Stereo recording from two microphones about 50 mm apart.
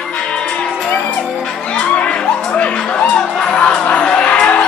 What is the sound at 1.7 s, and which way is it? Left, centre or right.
Music, left.